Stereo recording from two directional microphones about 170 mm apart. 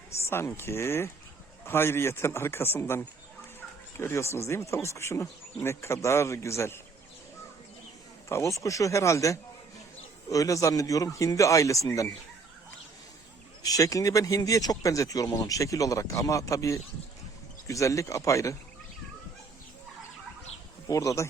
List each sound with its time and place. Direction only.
0.2 s speech: 15° left (ahead or behind)
8.3 s speech: 15° left (ahead or behind)
13.6 s speech: 20° left (ahead or behind)
20.8 s speech: 20° left (ahead or behind)